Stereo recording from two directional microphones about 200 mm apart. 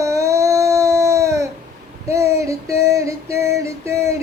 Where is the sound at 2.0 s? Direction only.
15° right (ahead or behind).